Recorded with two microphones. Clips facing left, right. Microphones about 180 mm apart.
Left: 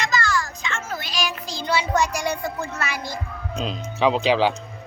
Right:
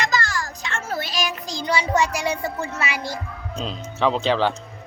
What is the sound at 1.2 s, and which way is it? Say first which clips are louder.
A child's voice: right 1 dB; 15° right (ahead or behind).